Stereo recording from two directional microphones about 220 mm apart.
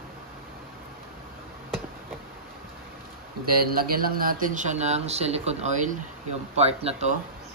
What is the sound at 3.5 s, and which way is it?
Speech, 40° right (ahead or behind).